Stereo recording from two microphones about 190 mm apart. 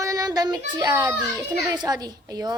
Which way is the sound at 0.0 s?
20° right (ahead or behind).